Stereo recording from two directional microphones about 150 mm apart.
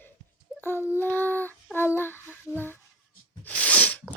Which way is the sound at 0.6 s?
15° left (ahead or behind).